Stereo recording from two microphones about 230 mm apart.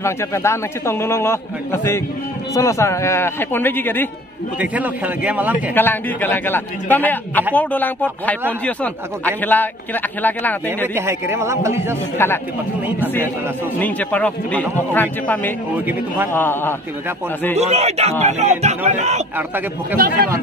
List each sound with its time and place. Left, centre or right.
0.0 s speech: centre
4.6 s a man's voice: centre
5.8 s speech: centre
11.0 s a man's voice: centre
12.2 s speech: centre
13.7 s speech: centre
17.6 s speech: right
19.3 s a man's voice: centre